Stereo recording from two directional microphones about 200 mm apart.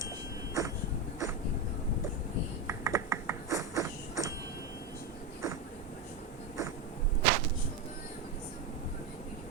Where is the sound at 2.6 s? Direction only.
15° right (ahead or behind).